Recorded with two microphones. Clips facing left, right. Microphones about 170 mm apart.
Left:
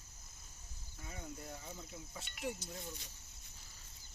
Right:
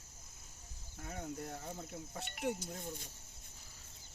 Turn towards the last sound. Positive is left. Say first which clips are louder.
# right 3 dB
turn(degrees=-50)  # may be behind; listen again after turning